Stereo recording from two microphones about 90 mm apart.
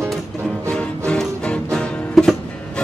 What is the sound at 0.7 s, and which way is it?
Music, 10° left (ahead or behind).